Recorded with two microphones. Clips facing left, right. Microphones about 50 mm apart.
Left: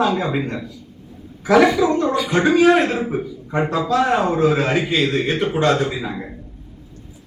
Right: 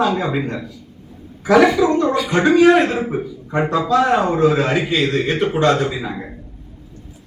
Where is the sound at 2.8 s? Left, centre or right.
Centre.